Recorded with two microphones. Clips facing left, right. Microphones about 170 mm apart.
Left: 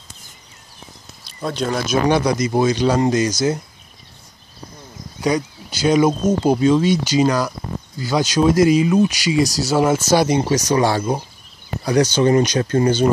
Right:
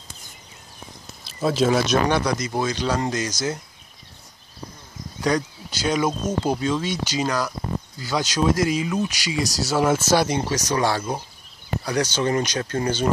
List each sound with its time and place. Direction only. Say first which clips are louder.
1.2 s speech: right 3 dB; 5° right (ahead or behind)
2.2 s speech: left 7 dB; 15° left (ahead or behind)
5.2 s speech: left 3 dB; 5° left (ahead or behind)